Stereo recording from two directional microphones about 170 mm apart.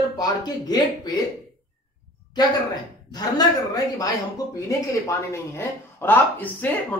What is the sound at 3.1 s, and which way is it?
Speech, 20° left (ahead or behind).